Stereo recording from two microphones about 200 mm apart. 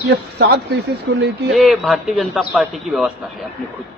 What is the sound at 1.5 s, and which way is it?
A man's voice, centre (ahead or behind).